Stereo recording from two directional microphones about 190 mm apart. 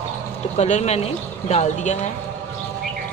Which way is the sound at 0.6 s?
35° left (ahead or behind).